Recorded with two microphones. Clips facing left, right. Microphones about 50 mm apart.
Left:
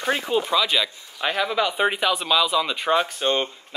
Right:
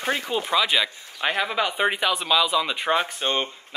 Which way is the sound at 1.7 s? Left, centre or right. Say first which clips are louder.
Left 1 dB; centre.